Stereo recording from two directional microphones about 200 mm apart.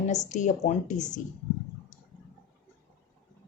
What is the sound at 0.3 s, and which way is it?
Speech, 35° left (ahead or behind).